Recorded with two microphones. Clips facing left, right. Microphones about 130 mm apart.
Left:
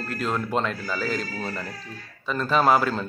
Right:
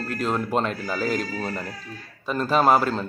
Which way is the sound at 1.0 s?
50° right (ahead or behind).